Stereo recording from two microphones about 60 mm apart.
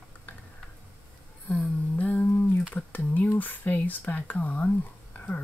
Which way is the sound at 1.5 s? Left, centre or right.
Left.